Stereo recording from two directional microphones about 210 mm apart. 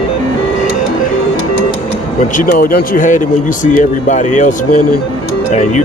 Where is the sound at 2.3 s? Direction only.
45° left (ahead or behind).